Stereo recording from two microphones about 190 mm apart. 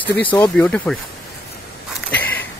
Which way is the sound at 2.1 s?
10° left (ahead or behind).